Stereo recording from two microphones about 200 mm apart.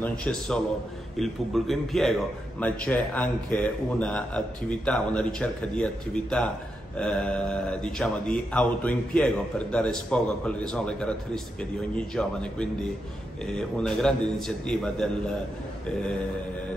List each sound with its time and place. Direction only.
0.0 s speech: 5° left (ahead or behind)